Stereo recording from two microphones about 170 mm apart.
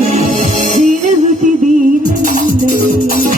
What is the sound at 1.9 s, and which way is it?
A woman's voice, 55° right (ahead or behind).